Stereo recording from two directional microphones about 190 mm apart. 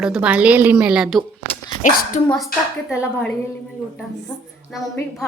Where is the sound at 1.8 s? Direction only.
45° left (ahead or behind).